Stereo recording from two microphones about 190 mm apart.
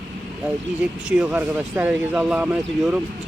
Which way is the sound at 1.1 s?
5° right (ahead or behind).